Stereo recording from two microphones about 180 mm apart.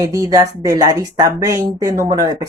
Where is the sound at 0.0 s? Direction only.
20° right (ahead or behind).